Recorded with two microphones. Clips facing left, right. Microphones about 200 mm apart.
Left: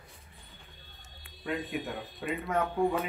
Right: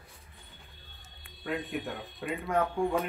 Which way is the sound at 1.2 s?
Centre (ahead or behind).